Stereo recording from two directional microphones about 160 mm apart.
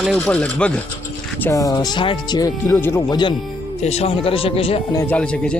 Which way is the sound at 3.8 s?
40° left (ahead or behind).